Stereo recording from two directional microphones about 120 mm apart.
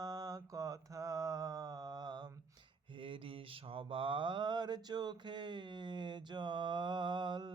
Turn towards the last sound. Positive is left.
turn(degrees=-40)  # may be behind; listen again after turning